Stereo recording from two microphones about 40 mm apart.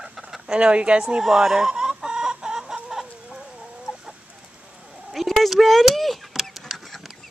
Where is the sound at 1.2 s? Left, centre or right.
Centre.